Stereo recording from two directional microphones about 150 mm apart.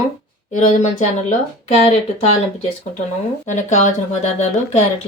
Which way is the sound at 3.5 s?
55° left (ahead or behind).